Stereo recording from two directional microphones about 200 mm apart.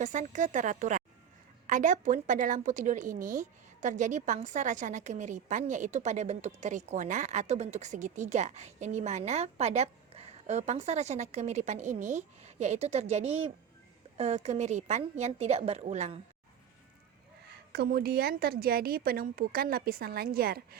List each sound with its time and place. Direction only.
0.0 s a woman's voice: 40° right (ahead or behind)
17.7 s a woman's voice: 50° right (ahead or behind)